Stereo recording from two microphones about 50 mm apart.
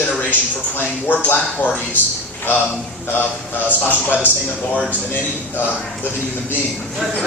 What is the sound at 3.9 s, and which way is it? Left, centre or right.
Speech, right.